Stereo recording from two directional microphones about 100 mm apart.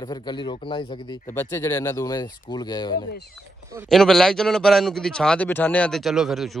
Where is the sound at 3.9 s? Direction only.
5° left (ahead or behind).